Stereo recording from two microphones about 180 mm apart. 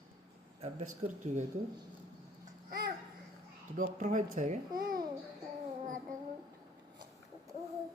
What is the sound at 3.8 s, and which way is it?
Speech, 45° right (ahead or behind).